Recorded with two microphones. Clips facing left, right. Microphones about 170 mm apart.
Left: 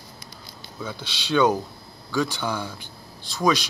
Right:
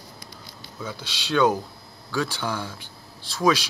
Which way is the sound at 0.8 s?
10° right (ahead or behind).